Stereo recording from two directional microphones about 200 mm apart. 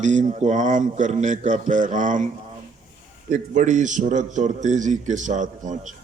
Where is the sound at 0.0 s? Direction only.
35° right (ahead or behind).